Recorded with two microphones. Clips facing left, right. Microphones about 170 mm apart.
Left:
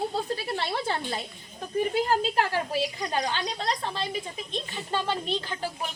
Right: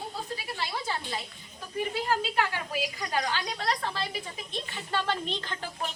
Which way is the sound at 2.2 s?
40° left (ahead or behind).